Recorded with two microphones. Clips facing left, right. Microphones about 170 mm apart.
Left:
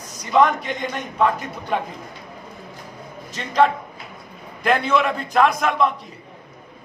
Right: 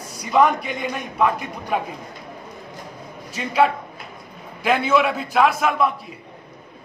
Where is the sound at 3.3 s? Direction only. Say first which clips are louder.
Left 1 dB; 10° right (ahead or behind).